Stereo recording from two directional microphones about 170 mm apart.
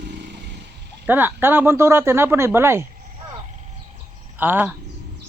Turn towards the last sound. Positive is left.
turn(degrees=-10)  # may be behind; listen again after turning